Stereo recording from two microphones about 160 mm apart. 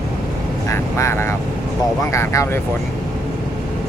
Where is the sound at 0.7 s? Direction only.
20° left (ahead or behind).